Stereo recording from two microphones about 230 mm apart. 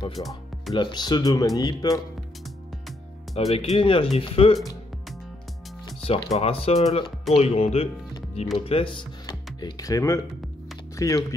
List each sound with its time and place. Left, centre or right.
0.1 s speech: centre
0.7 s speech: centre
3.5 s speech: left
5.9 s music: centre
6.3 s speech: left